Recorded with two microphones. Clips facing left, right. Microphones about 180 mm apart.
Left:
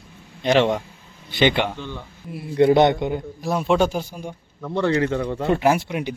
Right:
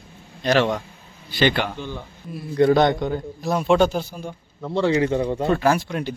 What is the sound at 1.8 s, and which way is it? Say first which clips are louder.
Speech: right 1 dB; 10° right (ahead or behind).